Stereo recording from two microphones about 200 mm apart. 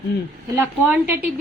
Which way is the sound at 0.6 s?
10° right (ahead or behind).